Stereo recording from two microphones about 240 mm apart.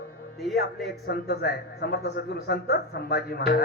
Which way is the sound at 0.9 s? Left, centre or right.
Left.